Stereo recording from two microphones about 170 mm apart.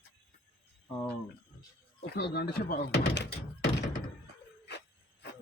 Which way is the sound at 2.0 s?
70° left (ahead or behind).